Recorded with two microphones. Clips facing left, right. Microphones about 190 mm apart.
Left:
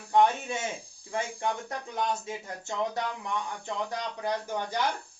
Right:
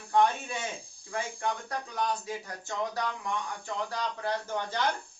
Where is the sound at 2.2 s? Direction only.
20° left (ahead or behind).